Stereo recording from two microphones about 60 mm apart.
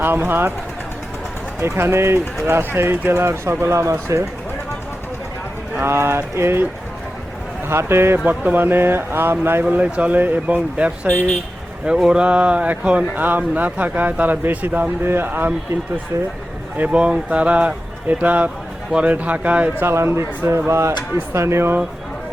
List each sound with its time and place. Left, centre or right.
0.0 s speech: right
1.6 s speech: right
3.6 s speech: right
5.8 s speech: right
7.7 s speech: right
8.2 s speech: right
9.6 s speech: right
11.1 s speech: left
11.9 s speech: centre
13.1 s speech: right
16.7 s speech: right
19.8 s speech: right